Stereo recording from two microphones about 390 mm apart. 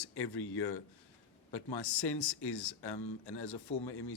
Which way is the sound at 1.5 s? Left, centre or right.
Left.